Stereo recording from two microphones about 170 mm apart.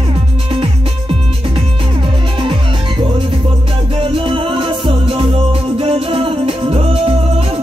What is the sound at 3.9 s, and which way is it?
Music, 35° right (ahead or behind).